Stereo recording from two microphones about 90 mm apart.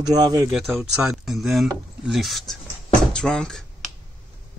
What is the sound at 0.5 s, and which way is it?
Speech, 5° right (ahead or behind).